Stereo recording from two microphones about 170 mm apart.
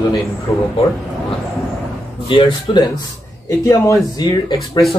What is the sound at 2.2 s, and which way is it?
Speech, 30° left (ahead or behind).